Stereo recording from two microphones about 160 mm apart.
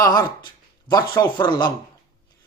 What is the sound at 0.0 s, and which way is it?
Speech, 25° left (ahead or behind).